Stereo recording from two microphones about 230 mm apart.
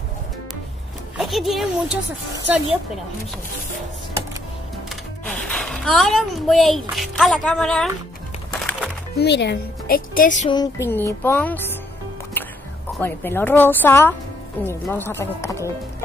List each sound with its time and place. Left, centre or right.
1.1 s speech: centre
5.2 s speech: centre
9.1 s a woman's voice: left
10.5 s music: centre
13.0 s music: centre